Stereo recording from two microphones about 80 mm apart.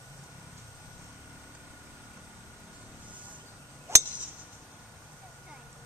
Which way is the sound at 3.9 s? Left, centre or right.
Right.